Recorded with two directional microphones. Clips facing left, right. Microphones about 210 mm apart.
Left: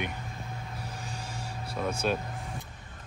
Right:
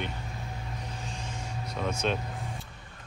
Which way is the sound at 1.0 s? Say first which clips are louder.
Even; 10° left (ahead or behind).